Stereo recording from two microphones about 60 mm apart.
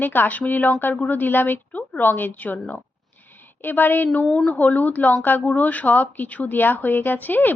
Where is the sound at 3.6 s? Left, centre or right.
Left.